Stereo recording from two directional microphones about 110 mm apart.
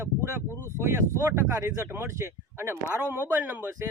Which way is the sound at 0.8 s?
25° right (ahead or behind).